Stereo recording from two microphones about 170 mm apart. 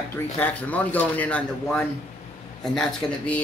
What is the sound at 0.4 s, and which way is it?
Speech, 10° left (ahead or behind).